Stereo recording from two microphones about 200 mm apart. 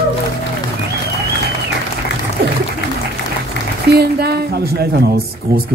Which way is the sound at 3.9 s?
55° right (ahead or behind).